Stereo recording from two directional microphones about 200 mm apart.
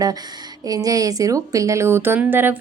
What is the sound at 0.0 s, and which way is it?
Speech, 20° right (ahead or behind).